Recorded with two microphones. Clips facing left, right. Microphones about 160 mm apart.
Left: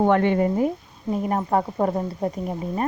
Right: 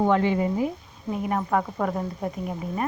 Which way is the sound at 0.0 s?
60° left (ahead or behind).